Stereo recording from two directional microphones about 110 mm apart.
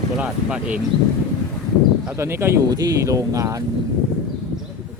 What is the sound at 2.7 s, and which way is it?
Speech, 35° right (ahead or behind).